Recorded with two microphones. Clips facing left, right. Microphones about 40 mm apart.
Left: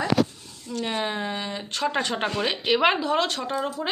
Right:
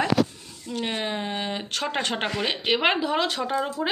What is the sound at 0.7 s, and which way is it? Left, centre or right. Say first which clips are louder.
Speech: even; right.